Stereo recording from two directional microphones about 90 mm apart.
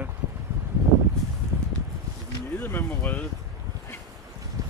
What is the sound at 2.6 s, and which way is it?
Speech, 20° left (ahead or behind).